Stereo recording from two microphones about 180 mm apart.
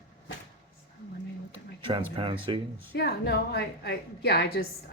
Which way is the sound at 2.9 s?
70° left (ahead or behind).